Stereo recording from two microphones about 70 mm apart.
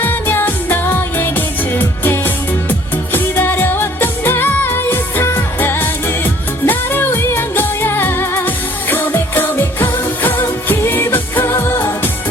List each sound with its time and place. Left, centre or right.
0.0 s music: left
5.5 s music of asia: left
6.7 s music: left
10.7 s music of asia: left